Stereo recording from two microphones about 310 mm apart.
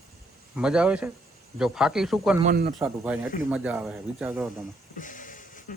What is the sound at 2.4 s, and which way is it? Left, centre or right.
Speech, right.